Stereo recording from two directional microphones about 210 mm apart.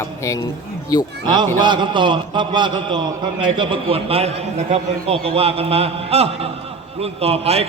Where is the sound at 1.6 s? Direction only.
20° right (ahead or behind).